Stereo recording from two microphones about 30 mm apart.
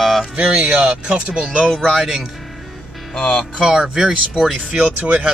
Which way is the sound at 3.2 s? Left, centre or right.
Left.